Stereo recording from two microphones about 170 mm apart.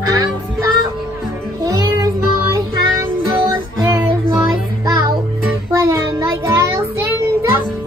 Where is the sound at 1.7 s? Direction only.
20° right (ahead or behind).